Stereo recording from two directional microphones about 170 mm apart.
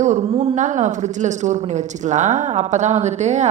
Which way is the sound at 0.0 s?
40° right (ahead or behind).